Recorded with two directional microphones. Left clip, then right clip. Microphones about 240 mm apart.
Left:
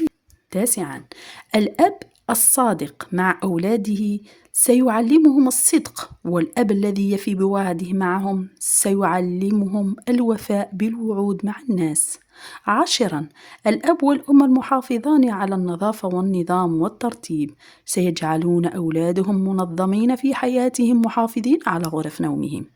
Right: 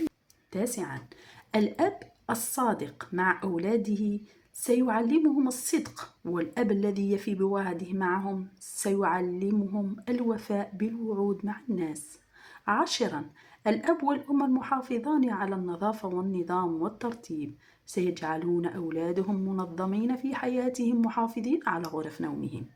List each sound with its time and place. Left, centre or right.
0.5 s speech: left